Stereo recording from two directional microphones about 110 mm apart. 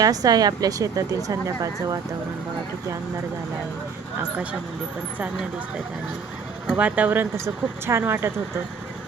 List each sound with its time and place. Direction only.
0.0 s speech: 35° right (ahead or behind)
6.7 s speech: 15° right (ahead or behind)